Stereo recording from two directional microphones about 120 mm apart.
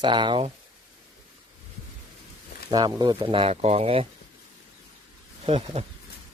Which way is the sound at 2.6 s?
35° right (ahead or behind).